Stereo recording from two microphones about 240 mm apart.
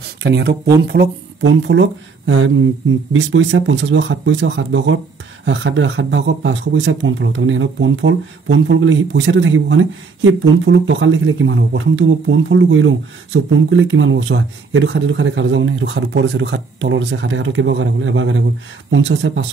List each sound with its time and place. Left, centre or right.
0.2 s speech: right